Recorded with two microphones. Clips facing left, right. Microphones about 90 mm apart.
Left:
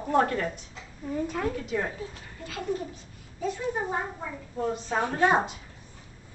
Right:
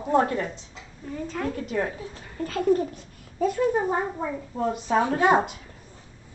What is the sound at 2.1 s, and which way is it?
Speech, 40° right (ahead or behind).